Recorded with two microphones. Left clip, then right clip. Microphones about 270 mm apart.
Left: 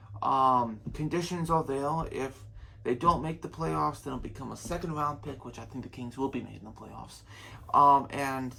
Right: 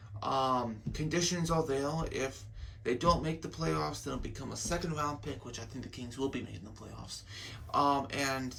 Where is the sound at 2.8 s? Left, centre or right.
Centre.